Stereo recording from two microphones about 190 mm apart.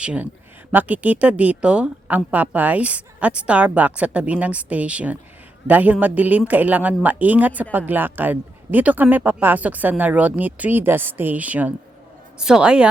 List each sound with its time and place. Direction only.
0.0 s a woman's voice: 5° right (ahead or behind)